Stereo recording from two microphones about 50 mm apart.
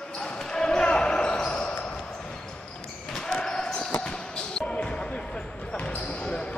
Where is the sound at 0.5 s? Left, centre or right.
Centre.